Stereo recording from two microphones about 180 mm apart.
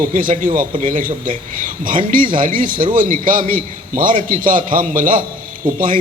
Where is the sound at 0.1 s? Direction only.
45° right (ahead or behind).